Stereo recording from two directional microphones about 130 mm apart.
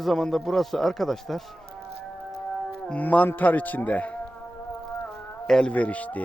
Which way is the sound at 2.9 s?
10° left (ahead or behind).